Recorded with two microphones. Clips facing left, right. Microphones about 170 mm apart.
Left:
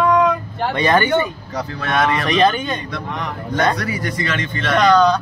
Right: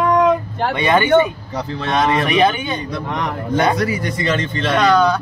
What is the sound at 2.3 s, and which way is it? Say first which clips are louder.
Speech: even; 5° right (ahead or behind).